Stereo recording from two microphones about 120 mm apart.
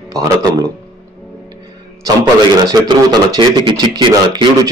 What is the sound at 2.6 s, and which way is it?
Speech, 35° right (ahead or behind).